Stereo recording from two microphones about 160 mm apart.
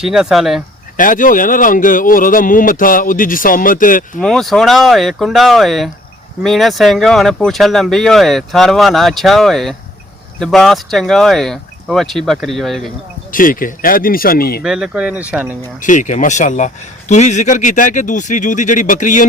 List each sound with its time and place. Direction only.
0.0 s speech: 5° right (ahead or behind)
0.9 s speech: 55° left (ahead or behind)
4.2 s speech: centre (ahead or behind)
13.3 s speech: 60° left (ahead or behind)
14.6 s speech: 5° right (ahead or behind)
15.8 s speech: 50° left (ahead or behind)